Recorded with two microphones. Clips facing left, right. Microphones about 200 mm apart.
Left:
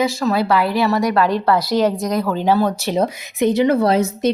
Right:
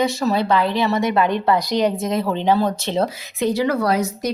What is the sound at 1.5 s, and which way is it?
Speech, 15° right (ahead or behind).